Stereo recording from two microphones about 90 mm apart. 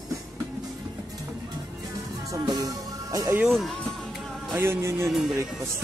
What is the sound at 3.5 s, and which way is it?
Speech, centre (ahead or behind).